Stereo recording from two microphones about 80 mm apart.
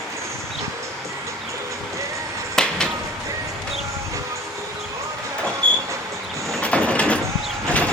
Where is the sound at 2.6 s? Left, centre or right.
Centre.